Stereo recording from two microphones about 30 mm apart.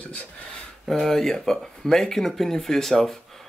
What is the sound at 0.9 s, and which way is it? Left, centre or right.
Speech, centre.